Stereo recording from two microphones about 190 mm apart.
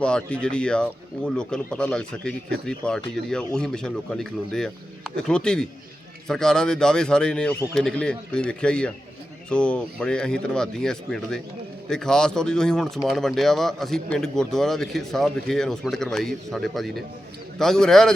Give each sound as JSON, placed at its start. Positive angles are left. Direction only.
{"t": 0.0, "sound": "a man's voice", "side_deg": 5}